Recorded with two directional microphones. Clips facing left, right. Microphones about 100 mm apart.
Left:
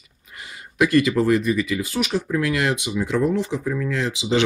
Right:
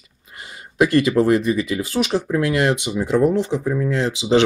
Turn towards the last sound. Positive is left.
turn(degrees=-25)  # may be behind; listen again after turning